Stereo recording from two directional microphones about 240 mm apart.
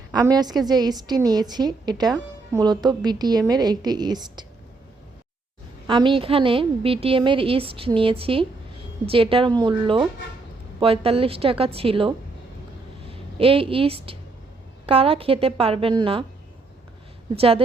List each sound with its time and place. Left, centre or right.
0.1 s a woman's voice: centre
5.9 s a woman's voice: centre
17.3 s a woman's voice: right